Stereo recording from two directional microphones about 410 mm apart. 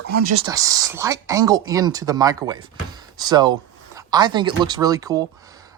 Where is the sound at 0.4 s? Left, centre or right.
Centre.